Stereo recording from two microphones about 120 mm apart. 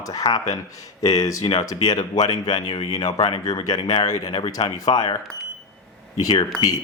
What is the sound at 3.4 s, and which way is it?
Speech, 35° left (ahead or behind).